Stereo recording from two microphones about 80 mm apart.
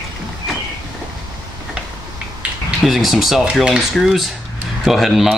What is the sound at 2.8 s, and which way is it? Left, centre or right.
Speech, centre.